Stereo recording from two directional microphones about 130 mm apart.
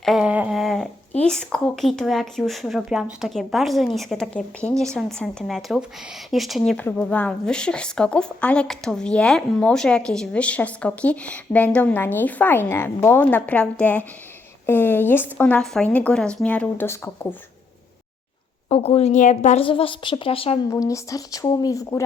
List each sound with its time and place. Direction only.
0.0 s a sound: 5° right (ahead or behind)
1.2 s speech: 5° left (ahead or behind)
6.7 s speech: 15° left (ahead or behind)
18.7 s a woman's voice: 50° left (ahead or behind)
19.6 s a woman's voice: 40° left (ahead or behind)
20.7 s speech: 25° left (ahead or behind)